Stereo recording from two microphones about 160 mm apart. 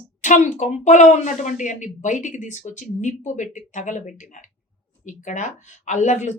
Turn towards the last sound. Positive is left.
turn(degrees=50)  # may be behind; listen again after turning